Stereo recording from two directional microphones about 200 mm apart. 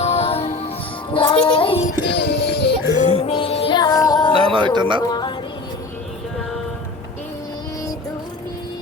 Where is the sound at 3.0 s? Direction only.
35° left (ahead or behind).